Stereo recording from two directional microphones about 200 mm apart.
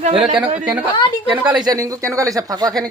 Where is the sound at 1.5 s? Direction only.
20° right (ahead or behind).